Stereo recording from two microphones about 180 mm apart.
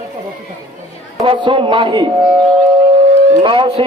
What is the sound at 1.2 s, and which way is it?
Speech, 30° right (ahead or behind).